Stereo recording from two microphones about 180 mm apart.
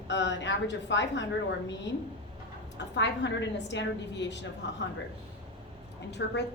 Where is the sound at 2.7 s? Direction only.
80° left.